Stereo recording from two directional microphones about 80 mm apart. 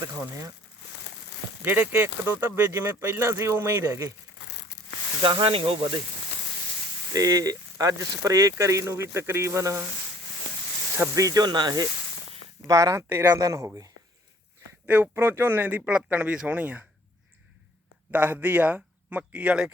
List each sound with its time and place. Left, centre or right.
0.0 s speech: right
1.6 s speech: right
5.2 s speech: right
7.1 s speech: right
11.1 s speech: right
12.6 s speech: right
13.1 s speech: right
13.4 s speech: right
14.8 s speech: right
18.1 s speech: right